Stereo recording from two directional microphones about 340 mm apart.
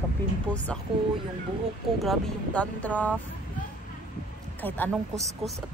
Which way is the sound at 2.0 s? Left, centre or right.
Centre.